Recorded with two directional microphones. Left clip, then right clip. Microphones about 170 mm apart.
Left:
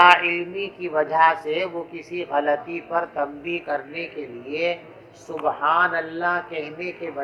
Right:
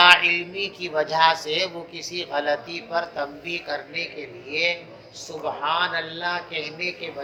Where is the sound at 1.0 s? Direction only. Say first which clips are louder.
Left 1 dB; 10° left (ahead or behind).